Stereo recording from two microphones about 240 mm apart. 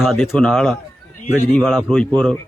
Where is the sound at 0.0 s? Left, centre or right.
Centre.